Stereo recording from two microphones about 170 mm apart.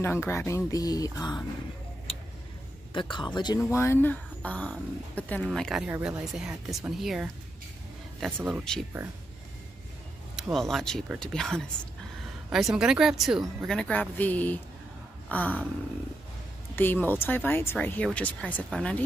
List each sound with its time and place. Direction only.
0.0 s speech: 15° left (ahead or behind)
2.1 s vehicle: 35° left (ahead or behind)
2.9 s speech: 30° left (ahead or behind); by 7.2 s 5° right (ahead or behind)
8.5 s speech: centre (ahead or behind)
10.3 s speech: centre (ahead or behind)
16.7 s speech: 10° left (ahead or behind)